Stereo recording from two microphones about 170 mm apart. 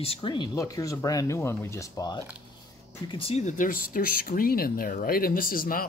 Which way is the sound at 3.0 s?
35° left (ahead or behind).